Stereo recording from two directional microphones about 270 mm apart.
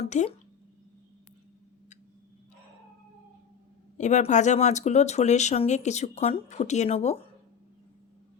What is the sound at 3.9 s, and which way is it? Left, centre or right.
Speech, left.